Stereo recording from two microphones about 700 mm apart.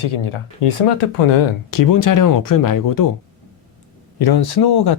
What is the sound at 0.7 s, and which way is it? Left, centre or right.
Speech, left.